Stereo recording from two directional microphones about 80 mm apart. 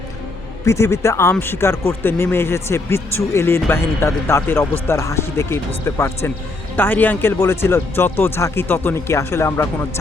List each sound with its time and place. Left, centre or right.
0.6 s speech: left